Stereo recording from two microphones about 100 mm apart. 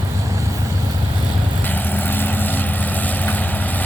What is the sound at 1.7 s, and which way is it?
Vehicle, 20° left (ahead or behind).